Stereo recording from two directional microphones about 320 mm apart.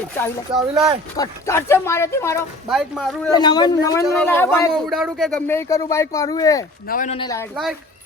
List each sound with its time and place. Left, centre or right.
0.7 s speech: centre
1.1 s speech: centre
3.3 s speech: centre
6.8 s speech: left
7.5 s speech: centre